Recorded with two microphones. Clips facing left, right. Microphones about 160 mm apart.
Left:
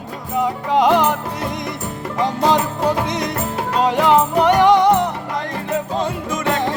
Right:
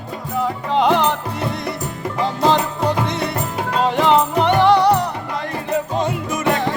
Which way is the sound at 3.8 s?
10° left (ahead or behind).